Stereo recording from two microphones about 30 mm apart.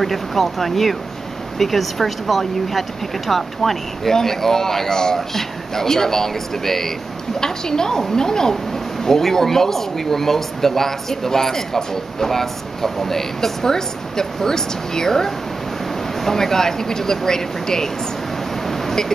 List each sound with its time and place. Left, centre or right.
0.0 s a woman's voice: centre